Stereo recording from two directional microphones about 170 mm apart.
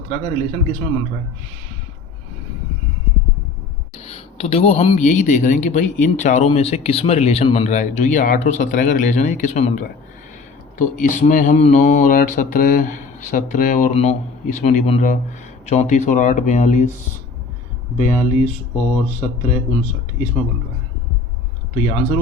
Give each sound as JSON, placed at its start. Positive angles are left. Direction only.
{"t": 0.1, "sound": "a man's voice", "side_deg": 40}
{"t": 3.9, "sound": "speech", "side_deg": 35}
{"t": 13.9, "sound": "a man's voice", "side_deg": 40}
{"t": 17.9, "sound": "speech", "side_deg": 45}
{"t": 21.8, "sound": "a man's voice", "side_deg": 40}